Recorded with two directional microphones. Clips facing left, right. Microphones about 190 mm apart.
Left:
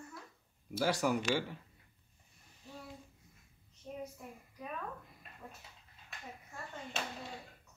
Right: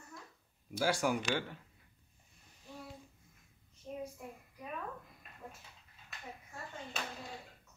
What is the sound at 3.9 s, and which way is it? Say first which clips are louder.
Child singing: right 1 dB; 15° left (ahead or behind).